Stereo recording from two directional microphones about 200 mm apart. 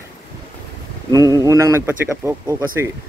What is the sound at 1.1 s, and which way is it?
Speech, 15° right (ahead or behind).